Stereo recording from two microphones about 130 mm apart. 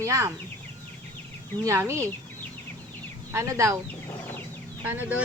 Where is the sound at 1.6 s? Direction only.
20° right (ahead or behind).